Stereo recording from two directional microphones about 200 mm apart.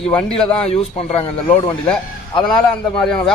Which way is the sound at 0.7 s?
30° left (ahead or behind).